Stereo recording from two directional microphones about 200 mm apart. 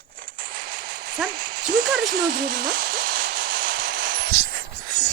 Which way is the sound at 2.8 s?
45° right (ahead or behind).